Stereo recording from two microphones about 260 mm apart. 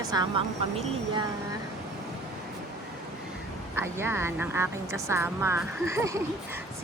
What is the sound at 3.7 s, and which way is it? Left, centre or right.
Speech, centre.